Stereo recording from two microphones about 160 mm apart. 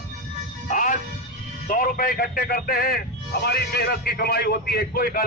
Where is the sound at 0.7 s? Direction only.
55° left (ahead or behind).